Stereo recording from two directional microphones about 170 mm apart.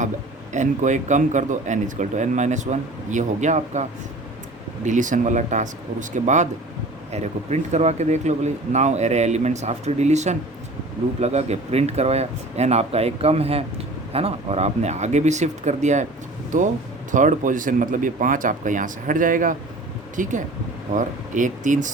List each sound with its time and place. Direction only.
0.5 s speech: 45° right (ahead or behind)